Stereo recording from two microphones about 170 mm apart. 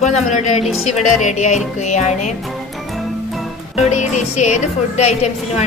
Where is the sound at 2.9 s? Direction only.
Centre (ahead or behind).